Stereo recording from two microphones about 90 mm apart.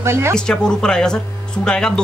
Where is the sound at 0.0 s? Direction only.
30° right (ahead or behind).